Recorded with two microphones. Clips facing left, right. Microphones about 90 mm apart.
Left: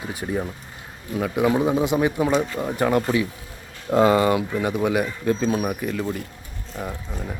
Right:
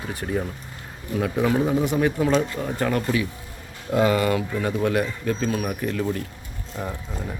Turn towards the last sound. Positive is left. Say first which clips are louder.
# even
turn(degrees=0)  # may be behind; listen again after turning